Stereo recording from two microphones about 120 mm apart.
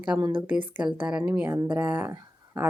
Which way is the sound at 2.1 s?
20° right (ahead or behind).